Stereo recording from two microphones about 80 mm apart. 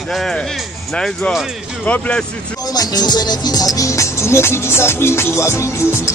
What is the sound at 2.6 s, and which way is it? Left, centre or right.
Music, left.